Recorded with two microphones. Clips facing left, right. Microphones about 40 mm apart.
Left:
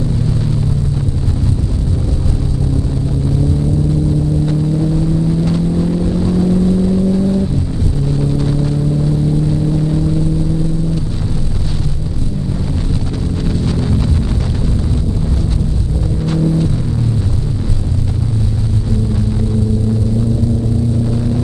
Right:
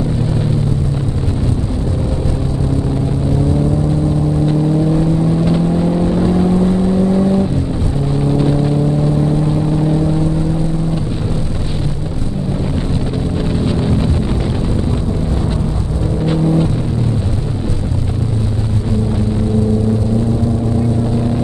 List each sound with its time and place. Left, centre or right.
5.4 s vehicle: centre
13.7 s wind noise: centre
16.3 s vehicle: right